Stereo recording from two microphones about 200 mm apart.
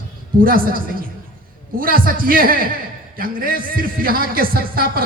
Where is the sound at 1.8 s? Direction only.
45° right (ahead or behind).